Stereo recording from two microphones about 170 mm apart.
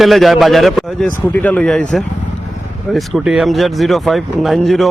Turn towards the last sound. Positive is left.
turn(degrees=0)  # may be behind; listen again after turning